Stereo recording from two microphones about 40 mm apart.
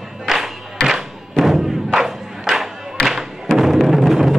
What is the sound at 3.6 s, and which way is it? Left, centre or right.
Music, centre.